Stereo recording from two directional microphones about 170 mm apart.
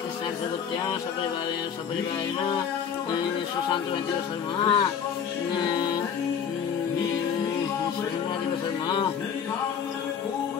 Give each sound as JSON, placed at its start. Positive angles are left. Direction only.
{"t": 4.6, "sound": "speech", "side_deg": 30}
{"t": 5.6, "sound": "music", "side_deg": 25}